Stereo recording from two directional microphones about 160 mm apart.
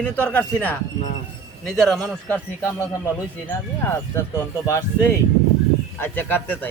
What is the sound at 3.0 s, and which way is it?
A man's voice, 15° left (ahead or behind).